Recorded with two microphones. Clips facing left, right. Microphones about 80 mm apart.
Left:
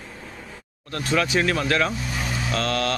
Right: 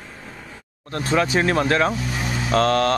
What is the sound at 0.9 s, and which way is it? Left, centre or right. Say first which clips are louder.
Speech: right 2 dB; right.